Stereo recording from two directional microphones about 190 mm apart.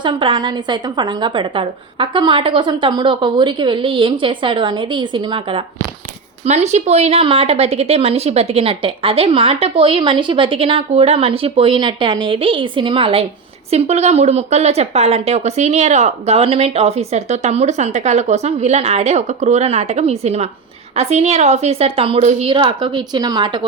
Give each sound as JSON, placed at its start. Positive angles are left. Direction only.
{"t": 0.0, "sound": "a woman's voice", "side_deg": -25}